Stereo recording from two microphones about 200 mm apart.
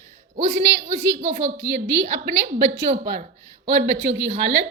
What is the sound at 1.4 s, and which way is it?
A woman's voice, 65° right (ahead or behind).